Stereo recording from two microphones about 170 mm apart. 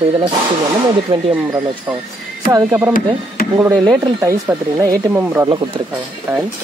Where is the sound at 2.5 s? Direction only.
20° right (ahead or behind).